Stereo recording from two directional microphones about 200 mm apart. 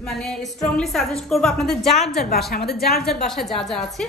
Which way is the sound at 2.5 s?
50° left (ahead or behind).